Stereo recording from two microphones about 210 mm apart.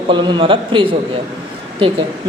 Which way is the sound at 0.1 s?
20° right (ahead or behind).